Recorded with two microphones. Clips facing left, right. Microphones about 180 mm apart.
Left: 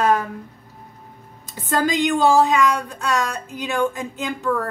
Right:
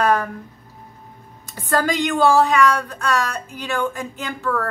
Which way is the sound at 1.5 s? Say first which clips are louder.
Even; 20° left (ahead or behind).